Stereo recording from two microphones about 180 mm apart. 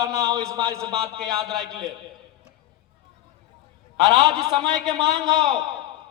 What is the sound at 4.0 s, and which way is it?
Speech, 25° right (ahead or behind).